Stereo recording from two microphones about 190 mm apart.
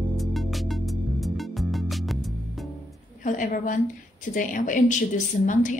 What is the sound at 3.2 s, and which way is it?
A woman's voice, 45° left (ahead or behind).